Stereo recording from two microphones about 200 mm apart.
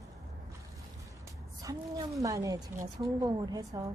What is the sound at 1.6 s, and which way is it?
A woman's voice, 20° right (ahead or behind).